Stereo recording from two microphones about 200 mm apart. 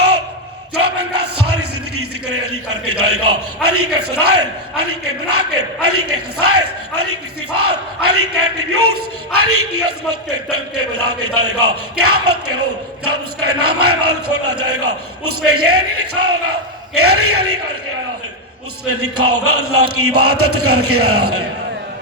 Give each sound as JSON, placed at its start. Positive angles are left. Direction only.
{"t": 0.9, "sound": "speech", "side_deg": -90}
{"t": 18.9, "sound": "speech", "side_deg": -90}